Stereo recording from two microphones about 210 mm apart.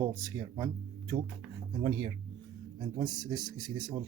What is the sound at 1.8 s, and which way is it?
Speech, 20° right (ahead or behind).